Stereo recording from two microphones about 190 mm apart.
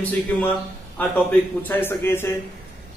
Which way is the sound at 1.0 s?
10° left (ahead or behind).